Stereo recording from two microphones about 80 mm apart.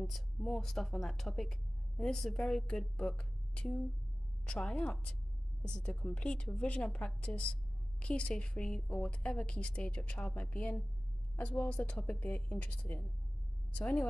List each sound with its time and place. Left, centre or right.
0.0 s a woman's voice: centre
13.7 s speech: centre